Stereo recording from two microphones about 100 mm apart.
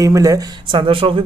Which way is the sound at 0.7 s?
60° right (ahead or behind).